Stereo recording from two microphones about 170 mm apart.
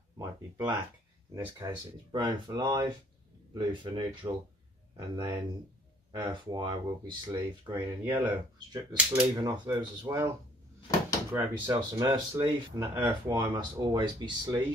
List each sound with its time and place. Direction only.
0.2 s speech: 25° right (ahead or behind)
9.4 s speech: 25° right (ahead or behind)
11.3 s speech: 25° right (ahead or behind)